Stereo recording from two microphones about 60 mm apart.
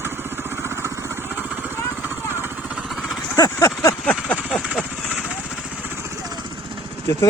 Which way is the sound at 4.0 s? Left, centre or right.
Left.